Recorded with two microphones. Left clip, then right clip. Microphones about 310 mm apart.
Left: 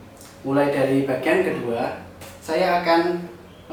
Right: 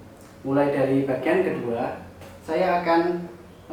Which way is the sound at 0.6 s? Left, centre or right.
Centre.